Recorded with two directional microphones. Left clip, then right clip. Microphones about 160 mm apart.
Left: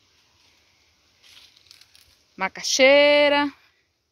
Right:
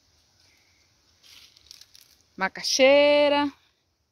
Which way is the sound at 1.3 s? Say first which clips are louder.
Even; 20° right (ahead or behind).